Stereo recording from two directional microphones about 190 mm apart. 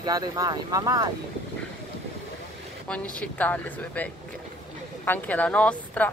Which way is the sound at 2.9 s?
5° left (ahead or behind).